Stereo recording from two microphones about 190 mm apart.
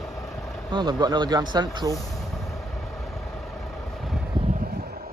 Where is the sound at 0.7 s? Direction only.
25° right (ahead or behind).